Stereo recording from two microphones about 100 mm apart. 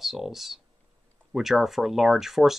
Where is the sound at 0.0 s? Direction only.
5° right (ahead or behind).